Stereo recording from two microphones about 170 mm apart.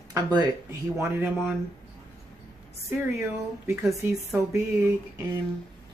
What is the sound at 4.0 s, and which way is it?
Speech, 15° right (ahead or behind).